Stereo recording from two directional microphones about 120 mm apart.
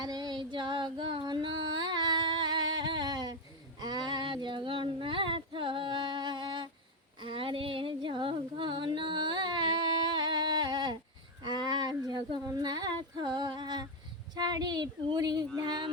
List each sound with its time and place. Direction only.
0.0 s female singing: 35° right (ahead or behind)
7.2 s a sound: 45° right (ahead or behind)
14.3 s speech: 35° right (ahead or behind)
15.5 s music: 35° right (ahead or behind)